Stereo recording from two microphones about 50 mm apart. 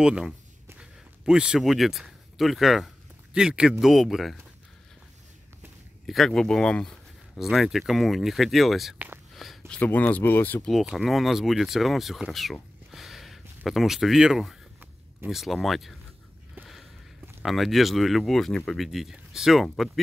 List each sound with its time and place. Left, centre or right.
0.0 s speech: centre
0.7 s a sound: centre
1.6 s speech: centre
3.3 s speech: centre
3.8 s speech: centre
6.0 s speech: centre
7.3 s speech: centre
9.3 s a sound: centre
9.8 s speech: left
11.1 s speech: centre
12.9 s a sound: centre
13.7 s speech: centre
17.5 s speech: centre
18.8 s speech: centre